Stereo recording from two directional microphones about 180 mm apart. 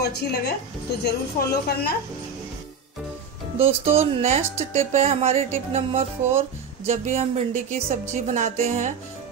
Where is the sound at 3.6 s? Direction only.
35° right (ahead or behind).